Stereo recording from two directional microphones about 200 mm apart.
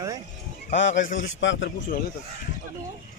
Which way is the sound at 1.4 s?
65° left (ahead or behind).